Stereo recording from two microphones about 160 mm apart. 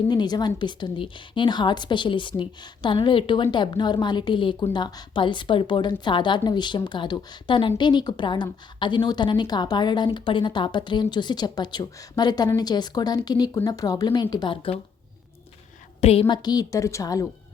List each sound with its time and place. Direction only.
0.1 s a woman's voice: 25° left (ahead or behind)
16.0 s a woman's voice: 40° left (ahead or behind)
16.3 s a woman's voice: 25° left (ahead or behind)